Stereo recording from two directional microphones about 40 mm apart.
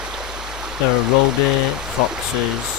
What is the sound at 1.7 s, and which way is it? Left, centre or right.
Speech, centre.